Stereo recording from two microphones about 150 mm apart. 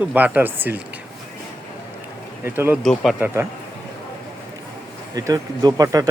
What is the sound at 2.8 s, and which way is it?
Speech, centre (ahead or behind).